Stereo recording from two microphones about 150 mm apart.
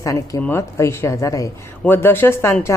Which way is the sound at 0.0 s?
20° left (ahead or behind).